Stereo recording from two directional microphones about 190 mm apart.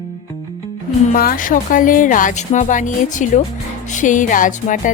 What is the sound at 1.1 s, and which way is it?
Speech, 45° left (ahead or behind).